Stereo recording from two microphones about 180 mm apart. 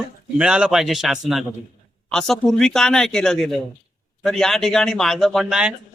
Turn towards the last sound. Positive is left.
turn(degrees=-5)  # may be behind; listen again after turning